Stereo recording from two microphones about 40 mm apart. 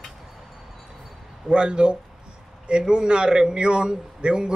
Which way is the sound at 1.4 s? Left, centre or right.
Right.